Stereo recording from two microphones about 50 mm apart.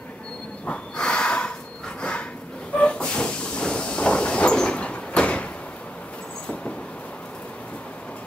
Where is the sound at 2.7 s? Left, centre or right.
Left.